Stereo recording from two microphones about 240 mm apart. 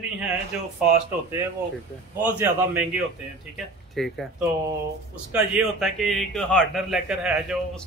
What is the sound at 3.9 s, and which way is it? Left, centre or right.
Speech, centre.